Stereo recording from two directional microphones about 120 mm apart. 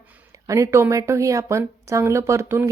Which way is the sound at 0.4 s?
25° right (ahead or behind).